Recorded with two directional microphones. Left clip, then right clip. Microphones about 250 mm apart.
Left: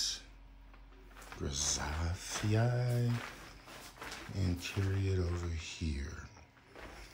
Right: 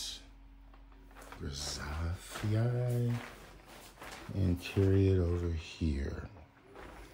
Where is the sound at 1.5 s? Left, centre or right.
Left.